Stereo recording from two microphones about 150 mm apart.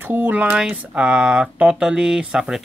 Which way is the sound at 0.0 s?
15° right (ahead or behind).